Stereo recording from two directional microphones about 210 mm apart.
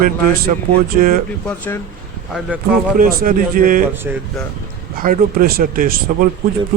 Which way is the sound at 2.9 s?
40° right (ahead or behind).